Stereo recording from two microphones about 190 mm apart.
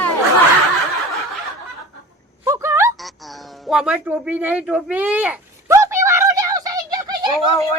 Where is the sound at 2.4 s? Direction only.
15° right (ahead or behind).